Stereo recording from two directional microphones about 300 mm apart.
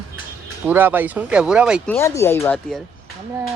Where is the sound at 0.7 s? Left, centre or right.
Centre.